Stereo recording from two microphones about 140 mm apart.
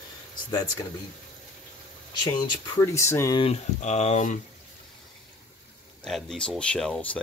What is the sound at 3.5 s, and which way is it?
Speech, 55° left (ahead or behind).